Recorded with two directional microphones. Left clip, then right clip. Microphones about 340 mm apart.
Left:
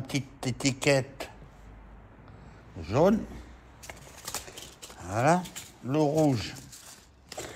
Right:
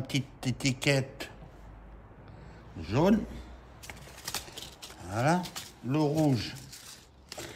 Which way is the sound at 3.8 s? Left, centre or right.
Centre.